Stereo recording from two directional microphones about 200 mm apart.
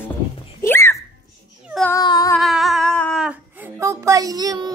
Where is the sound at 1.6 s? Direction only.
Centre (ahead or behind).